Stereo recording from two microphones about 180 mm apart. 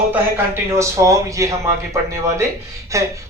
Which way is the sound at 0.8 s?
15° right (ahead or behind).